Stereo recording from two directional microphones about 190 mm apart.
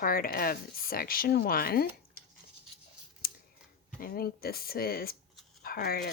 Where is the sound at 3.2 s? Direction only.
50° left (ahead or behind).